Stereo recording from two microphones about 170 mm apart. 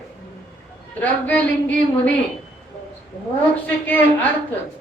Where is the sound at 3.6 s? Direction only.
10° left (ahead or behind).